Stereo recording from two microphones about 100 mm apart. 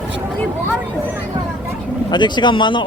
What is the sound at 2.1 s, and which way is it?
Speech, 50° left (ahead or behind).